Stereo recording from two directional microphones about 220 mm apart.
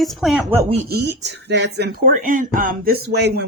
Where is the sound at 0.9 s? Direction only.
50° right (ahead or behind).